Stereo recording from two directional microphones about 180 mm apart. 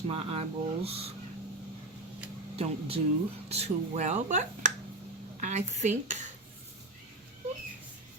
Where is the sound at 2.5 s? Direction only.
30° right (ahead or behind).